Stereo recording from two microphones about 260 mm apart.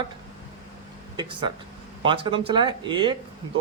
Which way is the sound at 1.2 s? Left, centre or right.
Centre.